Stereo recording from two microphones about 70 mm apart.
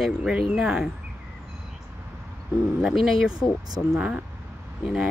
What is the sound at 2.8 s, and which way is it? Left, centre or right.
Speech, centre.